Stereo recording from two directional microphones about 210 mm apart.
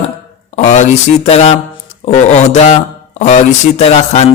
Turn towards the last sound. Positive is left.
turn(degrees=30)  # may be behind; listen again after turning